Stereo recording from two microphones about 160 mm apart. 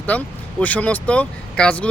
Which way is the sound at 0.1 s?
10° left (ahead or behind).